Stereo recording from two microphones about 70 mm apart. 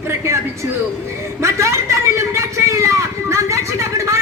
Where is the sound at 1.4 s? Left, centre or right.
Right.